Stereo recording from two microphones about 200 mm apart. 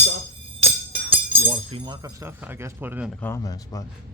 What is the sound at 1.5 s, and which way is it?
Speech, 25° right (ahead or behind).